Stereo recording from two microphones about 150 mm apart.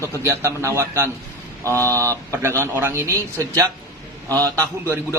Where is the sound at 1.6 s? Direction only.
15° left (ahead or behind).